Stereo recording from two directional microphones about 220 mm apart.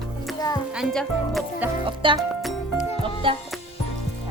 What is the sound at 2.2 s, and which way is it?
Music, centre (ahead or behind).